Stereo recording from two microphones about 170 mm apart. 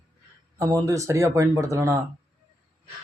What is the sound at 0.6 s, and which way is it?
Speech, 20° right (ahead or behind).